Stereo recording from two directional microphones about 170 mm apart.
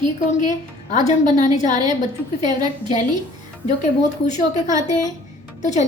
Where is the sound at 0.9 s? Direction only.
45° left (ahead or behind).